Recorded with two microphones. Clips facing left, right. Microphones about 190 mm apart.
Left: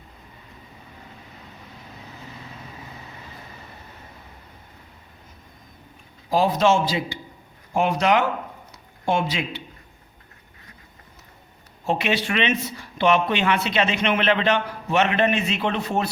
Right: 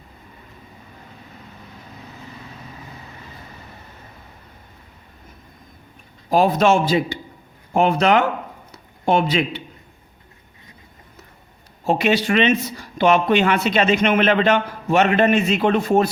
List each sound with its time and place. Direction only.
6.3 s a man's voice: 55° right (ahead or behind)
11.9 s speech: 40° right (ahead or behind)